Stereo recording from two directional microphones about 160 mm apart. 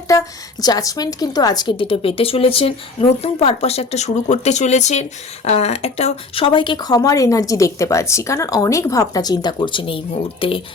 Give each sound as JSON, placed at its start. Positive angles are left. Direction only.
{"t": 0.1, "sound": "a woman's voice", "side_deg": 20}